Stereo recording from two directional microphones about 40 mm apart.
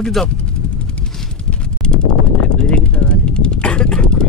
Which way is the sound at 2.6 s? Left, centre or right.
Left.